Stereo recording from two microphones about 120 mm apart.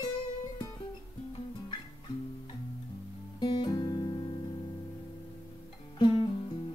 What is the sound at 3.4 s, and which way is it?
Guitar, 35° left (ahead or behind).